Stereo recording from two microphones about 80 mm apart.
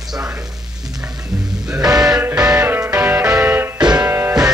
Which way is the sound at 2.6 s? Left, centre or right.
Right.